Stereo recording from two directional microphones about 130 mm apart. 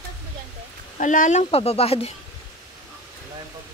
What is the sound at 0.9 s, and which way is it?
Speech, 80° left.